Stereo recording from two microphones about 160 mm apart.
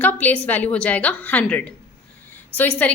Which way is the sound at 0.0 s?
10° left (ahead or behind).